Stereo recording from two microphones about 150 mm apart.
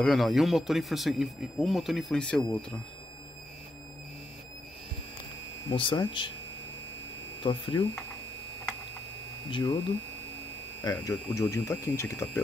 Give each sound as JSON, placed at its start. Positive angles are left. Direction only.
{"t": 0.0, "sound": "speech", "side_deg": 0}
{"t": 5.7, "sound": "speech", "side_deg": 35}
{"t": 7.4, "sound": "speech", "side_deg": 30}
{"t": 9.5, "sound": "speech", "side_deg": 25}
{"t": 10.8, "sound": "speech", "side_deg": 20}